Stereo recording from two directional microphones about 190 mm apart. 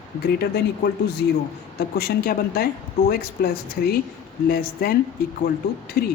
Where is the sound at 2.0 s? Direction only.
55° left (ahead or behind).